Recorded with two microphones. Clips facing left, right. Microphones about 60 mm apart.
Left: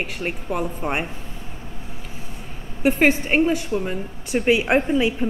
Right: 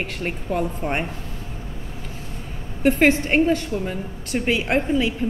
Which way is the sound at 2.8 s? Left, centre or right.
Centre.